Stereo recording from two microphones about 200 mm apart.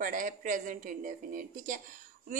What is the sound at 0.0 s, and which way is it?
A woman's voice, 40° right (ahead or behind).